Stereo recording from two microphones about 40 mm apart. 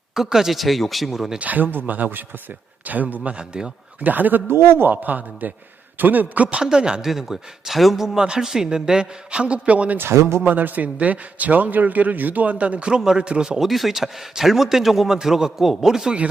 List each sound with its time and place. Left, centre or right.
0.1 s a man's voice: centre
0.6 s speech: centre
1.4 s speech: right
3.3 s a man's voice: right
4.0 s speech: right
4.5 s speech: right
4.9 s speech: right
6.6 s a man's voice: centre
7.1 s a man's voice: centre
8.0 s a man's voice: centre; by 10.0 s right
10.0 s speech: right
10.4 s a man's voice: right; by 13.7 s centre
13.7 s a man's voice: centre